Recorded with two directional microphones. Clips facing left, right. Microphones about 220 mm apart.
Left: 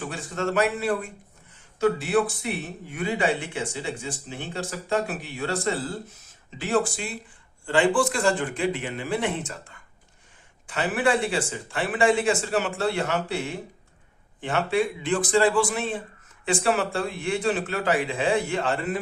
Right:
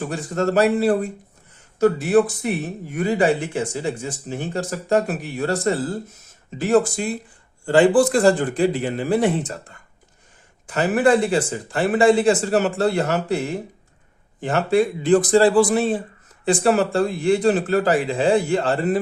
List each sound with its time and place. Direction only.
0.1 s speech: 40° right (ahead or behind)